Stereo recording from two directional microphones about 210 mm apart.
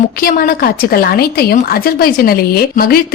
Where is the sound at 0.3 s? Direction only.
45° left (ahead or behind).